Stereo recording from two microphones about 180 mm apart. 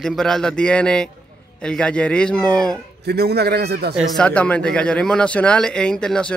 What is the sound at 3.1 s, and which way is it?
Speech, 65° right (ahead or behind).